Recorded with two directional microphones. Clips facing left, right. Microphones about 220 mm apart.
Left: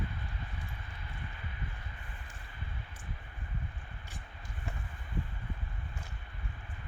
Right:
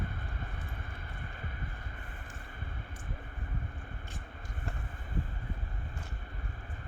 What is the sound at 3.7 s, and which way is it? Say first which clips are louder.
Vehicle: right 4 dB; 45° right (ahead or behind).